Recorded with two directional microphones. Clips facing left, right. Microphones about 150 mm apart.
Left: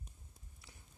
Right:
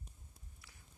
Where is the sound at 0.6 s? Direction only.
25° left (ahead or behind).